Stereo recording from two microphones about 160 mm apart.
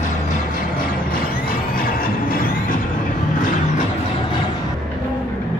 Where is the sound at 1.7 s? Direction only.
65° left (ahead or behind).